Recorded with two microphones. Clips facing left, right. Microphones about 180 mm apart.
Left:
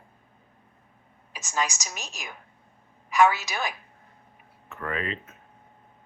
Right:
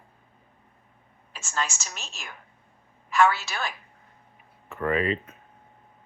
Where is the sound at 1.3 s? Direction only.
15° left (ahead or behind).